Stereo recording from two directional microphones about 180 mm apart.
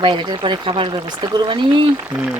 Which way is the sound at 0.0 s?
25° right (ahead or behind).